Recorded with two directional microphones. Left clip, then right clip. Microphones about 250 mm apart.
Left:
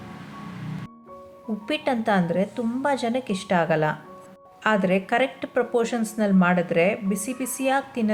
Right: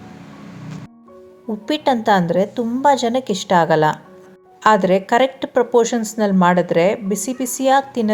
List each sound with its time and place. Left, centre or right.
1.6 s speech: centre